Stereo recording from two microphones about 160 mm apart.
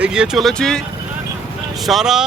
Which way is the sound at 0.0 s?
5° right (ahead or behind).